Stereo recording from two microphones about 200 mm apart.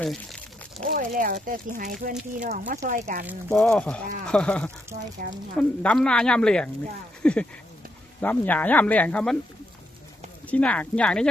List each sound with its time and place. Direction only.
0.0 s speech: centre (ahead or behind)
0.9 s speech: 45° right (ahead or behind)
3.2 s speech: centre (ahead or behind)
10.4 s speech: 5° left (ahead or behind)